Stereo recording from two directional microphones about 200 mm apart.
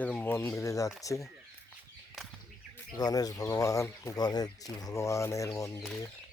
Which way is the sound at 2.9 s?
20° left (ahead or behind).